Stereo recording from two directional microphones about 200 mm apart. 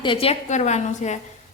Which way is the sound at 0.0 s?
25° left (ahead or behind).